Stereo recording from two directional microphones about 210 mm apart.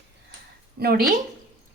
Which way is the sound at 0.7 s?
45° right (ahead or behind).